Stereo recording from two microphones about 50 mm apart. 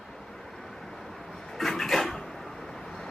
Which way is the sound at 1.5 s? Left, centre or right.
Centre.